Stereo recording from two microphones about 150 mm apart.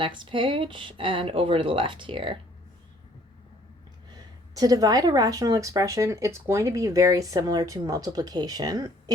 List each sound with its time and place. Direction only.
0.0 s speech: 35° right (ahead or behind)
4.1 s speech: 25° right (ahead or behind)